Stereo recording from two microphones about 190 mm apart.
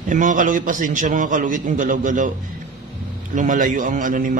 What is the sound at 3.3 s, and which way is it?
A man's voice, 40° right (ahead or behind).